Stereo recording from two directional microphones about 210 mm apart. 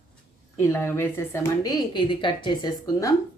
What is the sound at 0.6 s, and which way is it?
A woman's voice, 10° left (ahead or behind).